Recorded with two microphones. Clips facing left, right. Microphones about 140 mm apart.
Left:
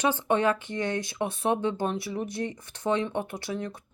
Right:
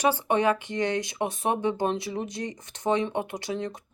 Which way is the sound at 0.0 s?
15° right (ahead or behind).